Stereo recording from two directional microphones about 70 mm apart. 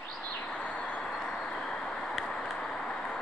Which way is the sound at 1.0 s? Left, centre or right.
Centre.